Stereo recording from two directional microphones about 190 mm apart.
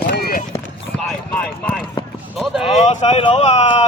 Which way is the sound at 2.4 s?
Centre (ahead or behind).